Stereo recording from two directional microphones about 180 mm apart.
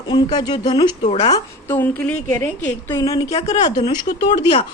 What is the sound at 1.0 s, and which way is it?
Speech, 35° left (ahead or behind).